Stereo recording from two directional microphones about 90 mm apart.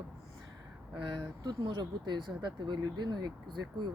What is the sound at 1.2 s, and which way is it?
Speech, 55° right (ahead or behind).